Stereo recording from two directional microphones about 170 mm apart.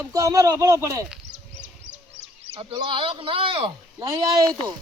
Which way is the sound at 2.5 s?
30° right (ahead or behind).